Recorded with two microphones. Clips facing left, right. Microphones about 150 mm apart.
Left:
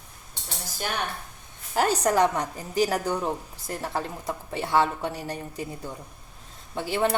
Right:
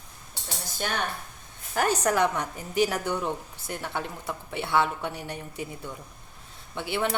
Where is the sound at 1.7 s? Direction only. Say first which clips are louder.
Left 2 dB; 30° left (ahead or behind).